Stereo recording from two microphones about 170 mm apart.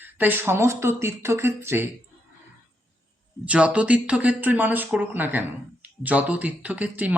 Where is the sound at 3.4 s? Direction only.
5° right (ahead or behind).